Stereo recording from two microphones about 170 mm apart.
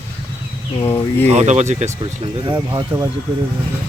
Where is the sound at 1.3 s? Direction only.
45° right (ahead or behind).